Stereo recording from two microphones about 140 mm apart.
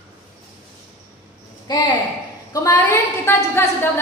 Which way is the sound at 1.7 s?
30° left (ahead or behind).